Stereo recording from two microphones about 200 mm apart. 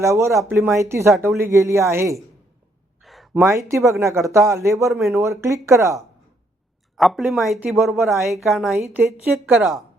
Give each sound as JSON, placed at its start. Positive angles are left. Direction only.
{"t": 0.0, "sound": "speech", "side_deg": -15}
{"t": 3.0, "sound": "a sound", "side_deg": 0}
{"t": 3.3, "sound": "speech", "side_deg": -15}
{"t": 6.9, "sound": "speech", "side_deg": 0}